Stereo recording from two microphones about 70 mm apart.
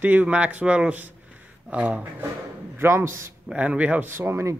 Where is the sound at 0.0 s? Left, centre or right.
Right.